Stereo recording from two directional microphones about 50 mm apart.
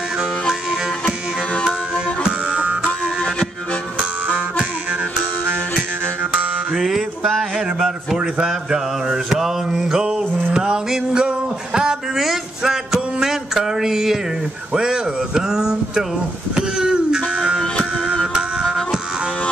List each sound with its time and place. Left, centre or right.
1.0 s music: left
2.4 s music: right
6.7 s music: centre
8.2 s mantra: centre
12.9 s music: centre
14.7 s a sound: centre
18.2 s music: centre